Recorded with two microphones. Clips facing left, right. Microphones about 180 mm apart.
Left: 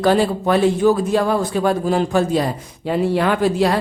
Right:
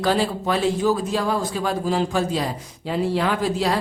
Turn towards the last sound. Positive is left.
turn(degrees=60)  # may be behind; listen again after turning